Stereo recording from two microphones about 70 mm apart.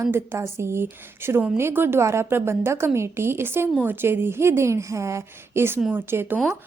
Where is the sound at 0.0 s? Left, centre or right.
Right.